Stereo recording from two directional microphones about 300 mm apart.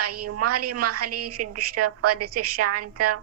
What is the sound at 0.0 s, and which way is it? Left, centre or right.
A woman's voice, right.